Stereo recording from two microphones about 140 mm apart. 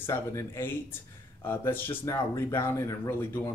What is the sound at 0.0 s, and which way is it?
Speech, 20° left (ahead or behind).